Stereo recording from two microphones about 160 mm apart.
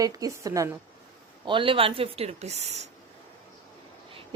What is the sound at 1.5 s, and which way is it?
Speech, 30° right (ahead or behind).